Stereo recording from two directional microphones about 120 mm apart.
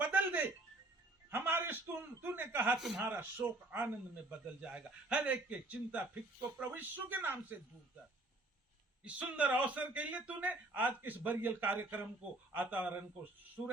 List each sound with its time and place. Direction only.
0.0 s music: 15° right (ahead or behind)
1.3 s chuckle: 15° right (ahead or behind)
2.7 s speech: 5° right (ahead or behind)
9.0 s speech: 10° right (ahead or behind)